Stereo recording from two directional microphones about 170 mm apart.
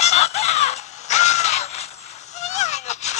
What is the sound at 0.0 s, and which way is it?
Crow, 40° left (ahead or behind).